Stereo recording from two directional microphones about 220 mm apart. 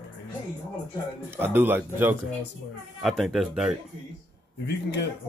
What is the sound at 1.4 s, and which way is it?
Speech, 10° right (ahead or behind).